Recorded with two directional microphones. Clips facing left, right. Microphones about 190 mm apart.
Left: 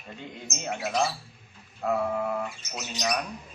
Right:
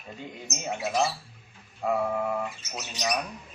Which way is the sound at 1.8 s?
10° right (ahead or behind).